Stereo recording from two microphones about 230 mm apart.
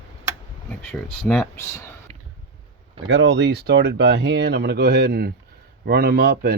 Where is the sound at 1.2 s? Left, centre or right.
Centre.